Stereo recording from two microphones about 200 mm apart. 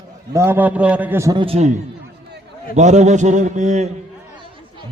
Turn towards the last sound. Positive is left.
turn(degrees=-35)  # may be behind; listen again after turning